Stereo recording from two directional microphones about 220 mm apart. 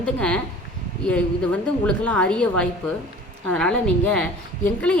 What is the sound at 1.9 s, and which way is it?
Speech, 5° left (ahead or behind).